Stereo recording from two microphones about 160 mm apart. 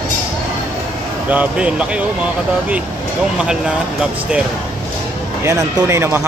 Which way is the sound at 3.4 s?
5° right (ahead or behind).